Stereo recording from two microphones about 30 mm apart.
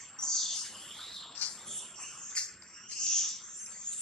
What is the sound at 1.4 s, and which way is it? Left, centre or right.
Bird, left.